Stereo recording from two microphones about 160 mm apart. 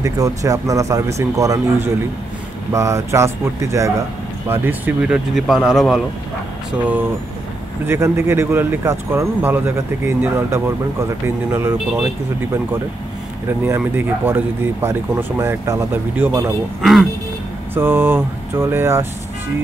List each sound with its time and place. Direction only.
0.0 s speech: 20° right (ahead or behind); by 5.9 s 5° right (ahead or behind)
7.8 s speech: 15° right (ahead or behind)
13.5 s speech: 15° right (ahead or behind)
17.7 s speech: 15° right (ahead or behind)